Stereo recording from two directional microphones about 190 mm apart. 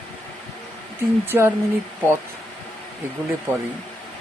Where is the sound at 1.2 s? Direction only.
15° right (ahead or behind).